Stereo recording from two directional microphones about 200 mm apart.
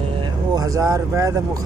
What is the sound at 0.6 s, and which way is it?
Speech, 15° right (ahead or behind).